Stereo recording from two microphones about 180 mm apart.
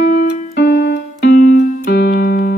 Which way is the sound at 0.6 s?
65° left (ahead or behind).